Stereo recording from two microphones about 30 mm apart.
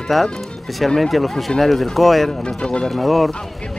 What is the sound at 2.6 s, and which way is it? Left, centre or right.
Speech, left.